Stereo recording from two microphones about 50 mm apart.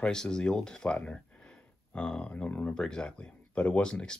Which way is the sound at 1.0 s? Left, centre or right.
Left.